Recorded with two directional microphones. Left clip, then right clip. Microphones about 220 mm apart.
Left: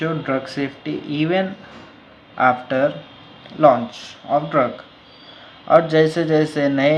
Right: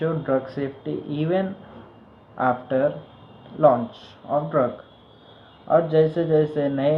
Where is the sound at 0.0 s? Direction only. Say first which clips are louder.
Left 1 dB; 25° left (ahead or behind).